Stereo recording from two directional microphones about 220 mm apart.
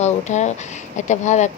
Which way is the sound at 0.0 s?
30° left (ahead or behind).